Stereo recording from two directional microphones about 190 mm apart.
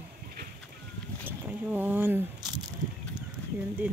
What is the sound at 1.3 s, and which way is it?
Speech, 10° right (ahead or behind).